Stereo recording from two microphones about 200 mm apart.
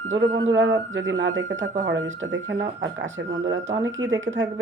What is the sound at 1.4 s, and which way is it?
Speech, 40° right (ahead or behind).